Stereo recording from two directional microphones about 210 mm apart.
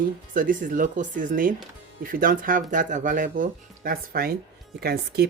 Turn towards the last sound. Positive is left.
turn(degrees=-50)  # may be behind; listen again after turning